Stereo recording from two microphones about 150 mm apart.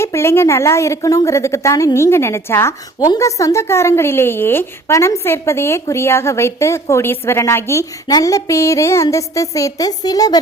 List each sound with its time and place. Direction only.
0.0 s a woman's voice: 15° left (ahead or behind)